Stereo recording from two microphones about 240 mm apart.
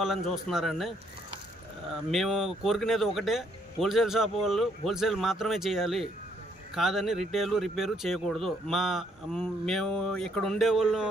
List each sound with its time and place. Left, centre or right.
0.0 s speech: centre
2.0 s speech: centre